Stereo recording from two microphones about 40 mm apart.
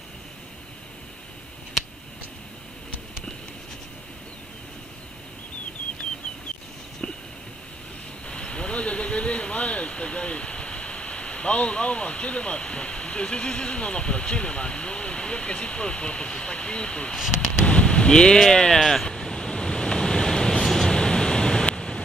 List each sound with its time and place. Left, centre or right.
8.3 s vehicle: left
17.6 s a sound: left
18.5 s speech: centre
19.0 s waves: centre